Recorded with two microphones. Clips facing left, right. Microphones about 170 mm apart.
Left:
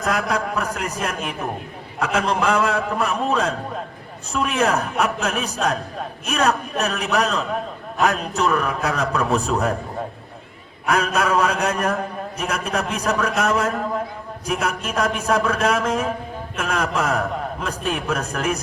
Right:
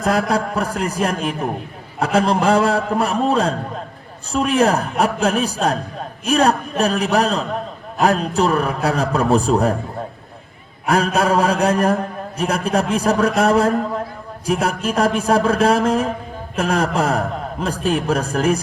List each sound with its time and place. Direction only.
0.0 s a man's voice: 35° right (ahead or behind)
10.8 s a man's voice: 30° right (ahead or behind)